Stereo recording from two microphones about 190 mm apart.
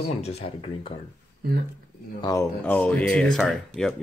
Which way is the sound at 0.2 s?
30° left (ahead or behind).